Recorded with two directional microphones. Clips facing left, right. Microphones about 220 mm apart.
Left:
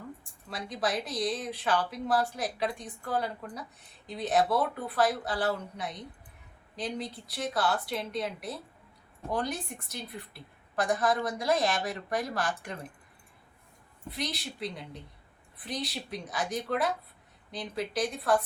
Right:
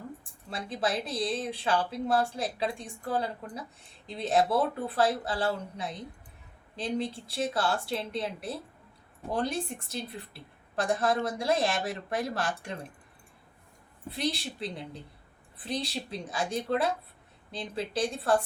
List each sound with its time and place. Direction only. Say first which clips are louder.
0.5 s a woman's voice: right 1 dB; 30° right (ahead or behind)
14.1 s a woman's voice: right 4 dB; 30° right (ahead or behind)